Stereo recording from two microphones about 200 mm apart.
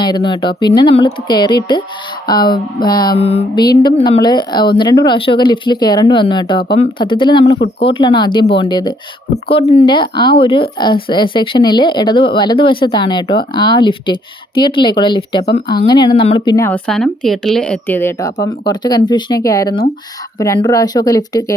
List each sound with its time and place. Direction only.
0.0 s speech: 25° left (ahead or behind)
16.6 s speech: 10° left (ahead or behind)